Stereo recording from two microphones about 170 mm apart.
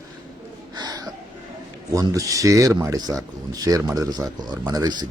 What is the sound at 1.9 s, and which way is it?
Speech, 20° right (ahead or behind).